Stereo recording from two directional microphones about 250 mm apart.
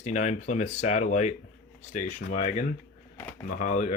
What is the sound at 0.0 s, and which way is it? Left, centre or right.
Speech, left.